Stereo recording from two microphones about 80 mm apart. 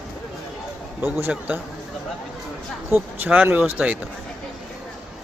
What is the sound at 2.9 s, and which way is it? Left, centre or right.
Speech, right.